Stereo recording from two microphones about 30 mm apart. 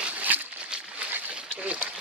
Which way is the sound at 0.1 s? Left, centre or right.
Right.